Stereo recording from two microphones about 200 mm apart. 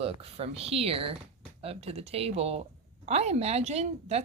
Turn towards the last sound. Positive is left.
turn(degrees=-35)  # may be behind; listen again after turning